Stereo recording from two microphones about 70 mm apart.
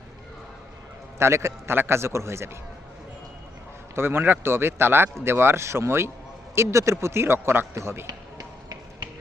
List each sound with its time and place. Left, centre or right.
1.2 s a man's voice: right
3.9 s a man's voice: right
8.0 s music: right